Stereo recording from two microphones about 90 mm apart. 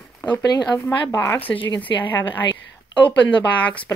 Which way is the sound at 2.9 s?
15° left (ahead or behind).